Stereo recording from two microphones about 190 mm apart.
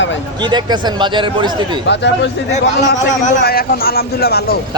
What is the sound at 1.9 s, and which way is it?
Speech, 65° left (ahead or behind).